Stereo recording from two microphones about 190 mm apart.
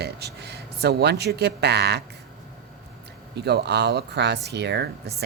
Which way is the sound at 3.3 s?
60° right (ahead or behind).